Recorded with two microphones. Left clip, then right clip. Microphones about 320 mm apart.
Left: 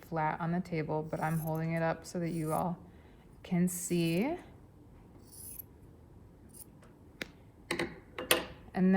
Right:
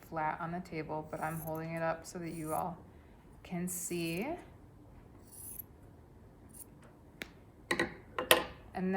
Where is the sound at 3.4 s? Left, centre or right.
Left.